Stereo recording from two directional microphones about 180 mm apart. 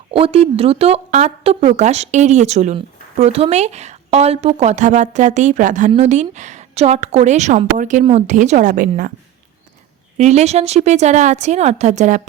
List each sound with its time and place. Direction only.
0.1 s a woman's voice: 30° right (ahead or behind); by 9.1 s 50° right (ahead or behind)
10.2 s speech: 40° right (ahead or behind)